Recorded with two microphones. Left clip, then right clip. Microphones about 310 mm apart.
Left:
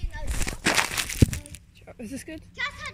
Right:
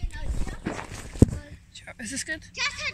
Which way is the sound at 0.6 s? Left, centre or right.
Left.